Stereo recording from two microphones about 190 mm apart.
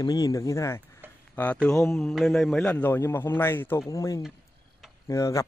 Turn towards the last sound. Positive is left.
turn(degrees=15)  # may be behind; listen again after turning